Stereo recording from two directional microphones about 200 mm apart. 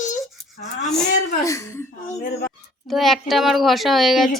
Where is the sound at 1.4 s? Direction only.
15° left (ahead or behind).